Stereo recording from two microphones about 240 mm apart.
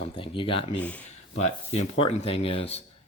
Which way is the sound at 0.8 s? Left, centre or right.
Centre.